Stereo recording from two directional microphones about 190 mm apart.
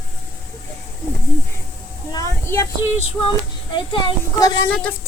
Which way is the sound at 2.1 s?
15° left (ahead or behind).